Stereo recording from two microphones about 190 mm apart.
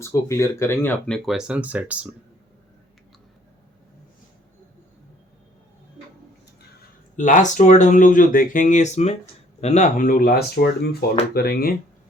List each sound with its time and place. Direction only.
0.0 s speech: 15° left (ahead or behind); by 2.0 s 10° right (ahead or behind)
7.2 s speech: 40° left (ahead or behind)